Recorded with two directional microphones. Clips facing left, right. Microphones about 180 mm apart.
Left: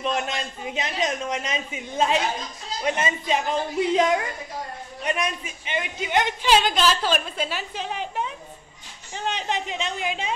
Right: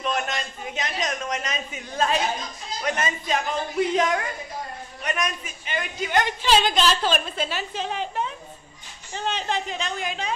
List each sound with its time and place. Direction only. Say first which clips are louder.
0.0 s a man's voice: left 1 dB; 30° left (ahead or behind)